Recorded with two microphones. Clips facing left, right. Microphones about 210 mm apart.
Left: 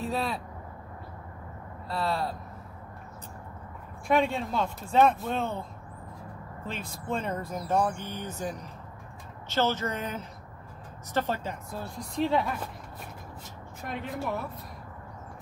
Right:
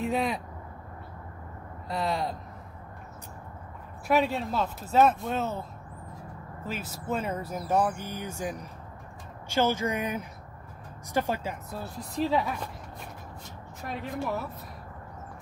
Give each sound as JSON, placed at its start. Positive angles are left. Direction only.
{"t": 0.0, "sound": "vehicle", "side_deg": -15}
{"t": 1.9, "sound": "speech", "side_deg": -15}
{"t": 4.1, "sound": "speech", "side_deg": -5}
{"t": 13.8, "sound": "speech", "side_deg": 0}